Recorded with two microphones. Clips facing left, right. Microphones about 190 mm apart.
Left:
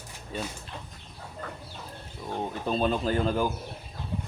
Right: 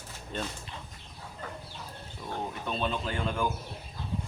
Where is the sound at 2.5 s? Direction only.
35° left (ahead or behind).